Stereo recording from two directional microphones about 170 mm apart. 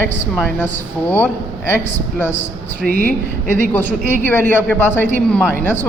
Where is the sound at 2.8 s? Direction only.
55° right (ahead or behind).